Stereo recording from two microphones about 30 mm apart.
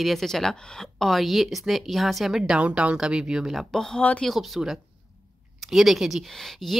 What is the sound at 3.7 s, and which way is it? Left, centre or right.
Speech, centre.